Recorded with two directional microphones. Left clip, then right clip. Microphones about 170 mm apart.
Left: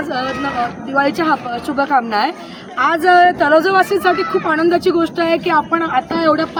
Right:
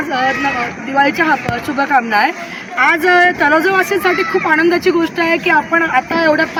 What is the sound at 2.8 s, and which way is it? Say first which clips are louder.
Speech: even; 20° left (ahead or behind).